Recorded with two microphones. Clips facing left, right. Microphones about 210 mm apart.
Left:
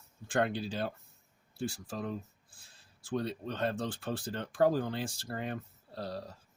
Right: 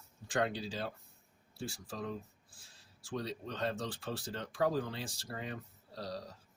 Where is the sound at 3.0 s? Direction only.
55° left (ahead or behind).